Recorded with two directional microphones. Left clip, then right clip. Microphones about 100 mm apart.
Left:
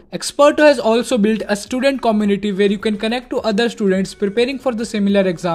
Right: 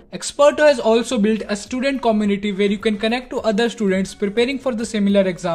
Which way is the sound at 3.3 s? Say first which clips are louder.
Left 4 dB; 50° left (ahead or behind).